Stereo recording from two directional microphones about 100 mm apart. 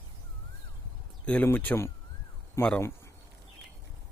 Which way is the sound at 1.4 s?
20° left (ahead or behind).